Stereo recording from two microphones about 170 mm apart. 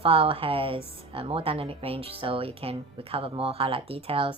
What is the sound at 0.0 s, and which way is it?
A woman's voice, 35° right (ahead or behind).